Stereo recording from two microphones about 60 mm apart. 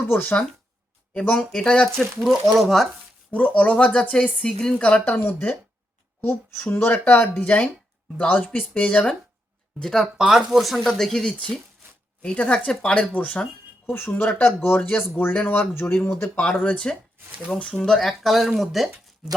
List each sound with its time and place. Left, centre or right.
0.1 s speech: left
1.4 s speech: centre
2.2 s speech: centre
3.3 s speech: left
4.8 s speech: left
6.7 s speech: left
9.8 s speech: centre
10.2 s speech: centre; by 13.5 s left
13.8 s speech: left
15.7 s speech: left
16.3 s speech: left
18.2 s speech: centre